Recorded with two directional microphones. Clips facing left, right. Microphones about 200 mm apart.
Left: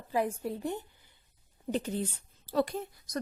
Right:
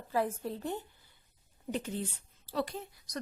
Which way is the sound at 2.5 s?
45° left (ahead or behind).